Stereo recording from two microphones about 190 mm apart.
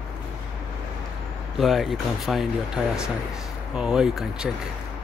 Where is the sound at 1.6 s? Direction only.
Centre (ahead or behind).